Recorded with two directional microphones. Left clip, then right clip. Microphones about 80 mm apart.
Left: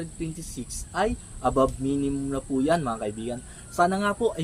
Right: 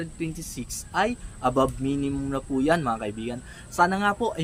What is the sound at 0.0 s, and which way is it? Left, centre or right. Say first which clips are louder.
Speech: right 2 dB; right.